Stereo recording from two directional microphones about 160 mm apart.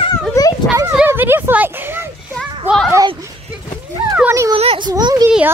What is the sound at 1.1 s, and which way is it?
A child's voice, 15° right (ahead or behind).